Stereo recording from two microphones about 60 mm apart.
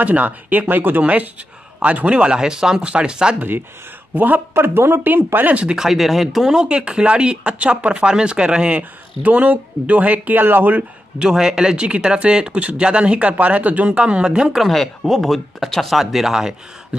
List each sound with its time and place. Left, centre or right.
0.0 s speech: right
3.3 s speech: right
4.6 s speech: right
5.8 s speech: centre
6.5 s speech: centre; by 10.8 s right
10.8 s speech: centre
14.6 s speech: centre